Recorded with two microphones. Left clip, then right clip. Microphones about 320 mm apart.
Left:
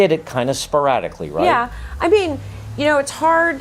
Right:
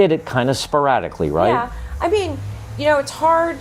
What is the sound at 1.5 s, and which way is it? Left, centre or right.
Speech, left.